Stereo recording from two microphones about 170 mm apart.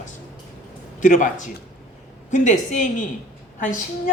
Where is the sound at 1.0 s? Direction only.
45° left (ahead or behind).